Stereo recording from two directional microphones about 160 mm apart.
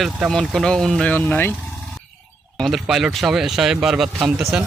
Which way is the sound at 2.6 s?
Centre (ahead or behind).